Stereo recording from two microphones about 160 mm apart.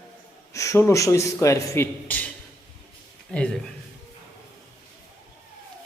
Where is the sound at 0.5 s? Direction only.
20° left (ahead or behind).